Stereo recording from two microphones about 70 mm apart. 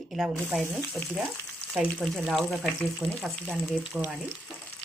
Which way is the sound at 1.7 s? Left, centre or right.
Centre.